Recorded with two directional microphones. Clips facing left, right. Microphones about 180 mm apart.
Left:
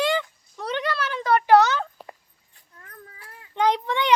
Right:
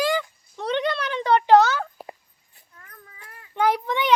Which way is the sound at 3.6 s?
20° left (ahead or behind).